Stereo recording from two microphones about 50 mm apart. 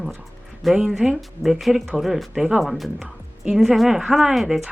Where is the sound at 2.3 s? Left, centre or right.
Centre.